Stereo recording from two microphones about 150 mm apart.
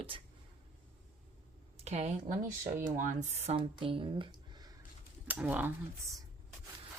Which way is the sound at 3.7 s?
35° right (ahead or behind).